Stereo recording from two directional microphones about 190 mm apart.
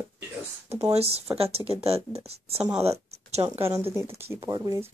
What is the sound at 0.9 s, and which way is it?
Speech, 30° right (ahead or behind).